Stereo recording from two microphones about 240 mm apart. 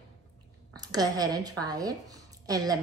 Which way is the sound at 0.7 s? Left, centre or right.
Centre.